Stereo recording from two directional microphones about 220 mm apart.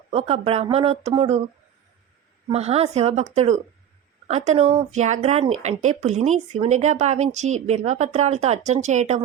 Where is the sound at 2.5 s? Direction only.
30° right (ahead or behind).